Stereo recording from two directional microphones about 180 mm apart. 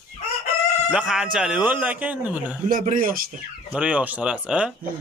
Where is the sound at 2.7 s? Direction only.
50° right (ahead or behind).